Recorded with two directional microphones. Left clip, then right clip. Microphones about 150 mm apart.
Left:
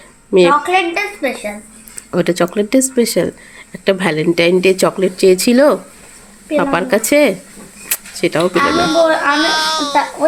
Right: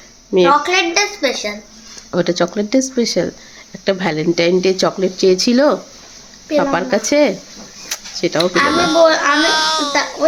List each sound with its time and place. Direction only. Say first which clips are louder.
0.6 s a woman's voice: even; 20° right (ahead or behind)
2.0 s speech: left 1 dB; centre (ahead or behind)
7.9 s a sound: left 2 dB; 5° left (ahead or behind)
8.6 s a child's voice: right 1 dB; centre (ahead or behind)